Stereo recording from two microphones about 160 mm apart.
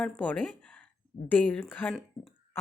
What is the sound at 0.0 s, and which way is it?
Speech, 10° left (ahead or behind).